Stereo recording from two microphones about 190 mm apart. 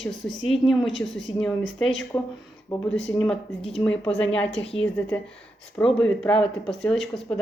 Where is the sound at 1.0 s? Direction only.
90° left.